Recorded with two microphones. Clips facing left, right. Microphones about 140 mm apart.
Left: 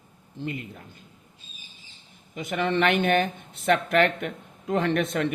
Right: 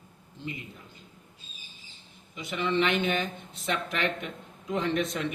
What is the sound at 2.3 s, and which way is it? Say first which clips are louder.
A man's voice: left 3 dB; 50° left (ahead or behind).